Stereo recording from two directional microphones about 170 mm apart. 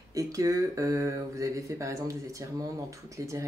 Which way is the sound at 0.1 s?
20° right (ahead or behind).